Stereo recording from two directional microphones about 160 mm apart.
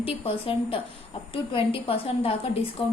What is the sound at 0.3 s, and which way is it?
A woman's voice, 35° left (ahead or behind).